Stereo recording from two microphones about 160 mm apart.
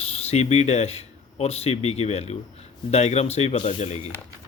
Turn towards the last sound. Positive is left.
turn(degrees=45)  # may be behind; listen again after turning